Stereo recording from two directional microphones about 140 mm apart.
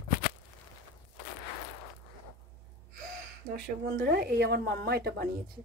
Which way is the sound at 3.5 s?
90° right.